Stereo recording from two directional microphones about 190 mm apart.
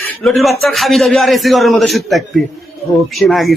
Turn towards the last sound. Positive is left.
turn(degrees=0)  # may be behind; listen again after turning